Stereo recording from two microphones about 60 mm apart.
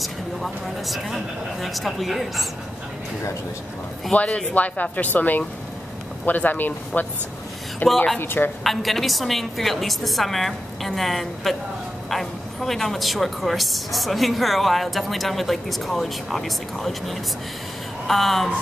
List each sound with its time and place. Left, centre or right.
0.0 s speech: centre
4.1 s speech: centre; by 8.5 s left
8.6 s speech: centre